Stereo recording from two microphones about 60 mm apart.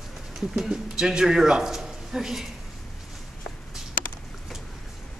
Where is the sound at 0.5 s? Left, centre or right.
Centre.